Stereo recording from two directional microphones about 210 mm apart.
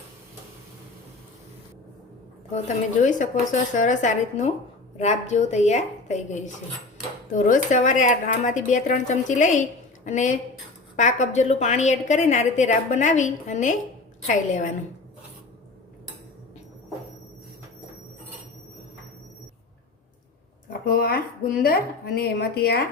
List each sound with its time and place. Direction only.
3.0 s a woman's voice: 35° left (ahead or behind)
20.8 s speech: 45° left (ahead or behind)